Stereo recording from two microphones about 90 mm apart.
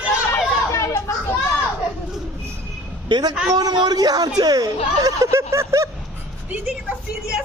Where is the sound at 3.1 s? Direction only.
50° right (ahead or behind).